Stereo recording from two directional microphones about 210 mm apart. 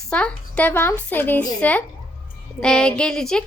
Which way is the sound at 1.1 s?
10° left (ahead or behind).